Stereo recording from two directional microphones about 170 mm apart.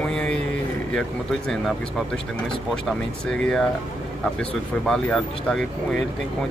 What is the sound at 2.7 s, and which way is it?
Speech, 5° left (ahead or behind).